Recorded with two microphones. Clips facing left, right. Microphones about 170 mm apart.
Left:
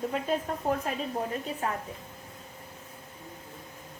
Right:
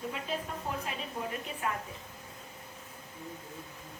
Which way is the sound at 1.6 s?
35° left (ahead or behind).